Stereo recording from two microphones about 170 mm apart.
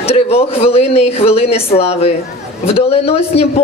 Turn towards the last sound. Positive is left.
turn(degrees=35)  # may be behind; listen again after turning